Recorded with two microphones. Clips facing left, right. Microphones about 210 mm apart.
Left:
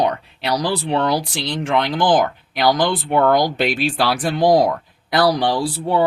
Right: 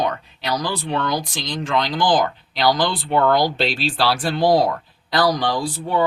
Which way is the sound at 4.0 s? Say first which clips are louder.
Even; 20° left (ahead or behind).